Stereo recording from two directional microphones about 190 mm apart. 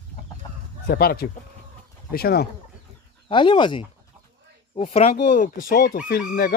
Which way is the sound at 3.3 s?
25° left (ahead or behind).